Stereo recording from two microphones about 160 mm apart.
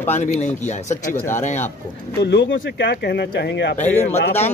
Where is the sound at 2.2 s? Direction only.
75° left (ahead or behind).